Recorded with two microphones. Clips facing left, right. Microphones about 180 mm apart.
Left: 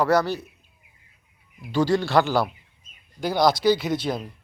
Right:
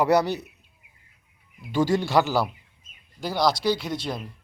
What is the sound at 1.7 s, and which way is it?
A man's voice, 10° right (ahead or behind).